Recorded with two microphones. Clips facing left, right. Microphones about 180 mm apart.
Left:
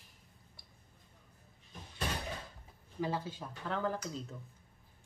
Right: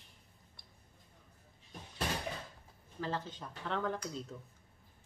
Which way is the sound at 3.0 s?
10° left (ahead or behind).